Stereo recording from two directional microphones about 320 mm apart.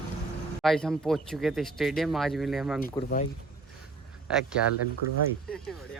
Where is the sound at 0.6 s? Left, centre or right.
Centre.